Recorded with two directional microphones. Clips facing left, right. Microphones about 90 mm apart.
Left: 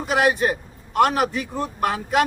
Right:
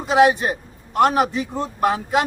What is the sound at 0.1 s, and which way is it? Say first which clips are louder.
A man's voice: right 4 dB; 20° right (ahead or behind).